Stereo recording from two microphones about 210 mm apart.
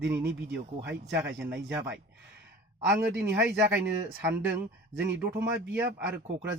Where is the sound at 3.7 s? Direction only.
55° right (ahead or behind).